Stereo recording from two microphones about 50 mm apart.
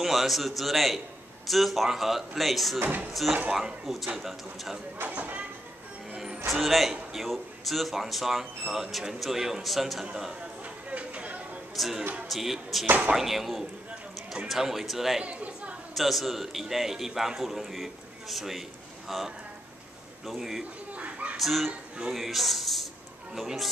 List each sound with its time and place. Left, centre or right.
0.0 s speech: centre
5.0 s speech: right
6.1 s music: centre
6.5 s speech: centre
10.6 s a sound: right
11.7 s speech: centre
12.0 s speech: right
12.3 s speech: centre
12.8 s speech: right
13.1 s speech: centre
15.2 s chatter: right
15.9 s speech: centre
20.9 s a sound: right
21.4 s speech: centre